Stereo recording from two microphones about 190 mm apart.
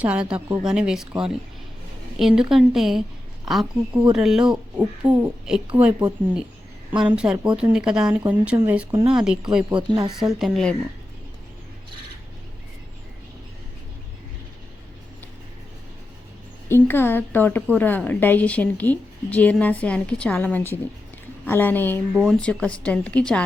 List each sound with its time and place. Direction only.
0.0 s a woman's voice: 5° right (ahead or behind)
8.9 s speech: 25° right (ahead or behind)
9.1 s speech: 5° right (ahead or behind)
9.7 s speech: 25° right (ahead or behind)
10.2 s speech: centre (ahead or behind)
16.6 s a woman's voice: 10° left (ahead or behind)
22.1 s speech: centre (ahead or behind)